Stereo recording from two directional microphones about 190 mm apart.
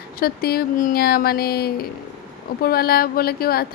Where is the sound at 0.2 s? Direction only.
55° left (ahead or behind).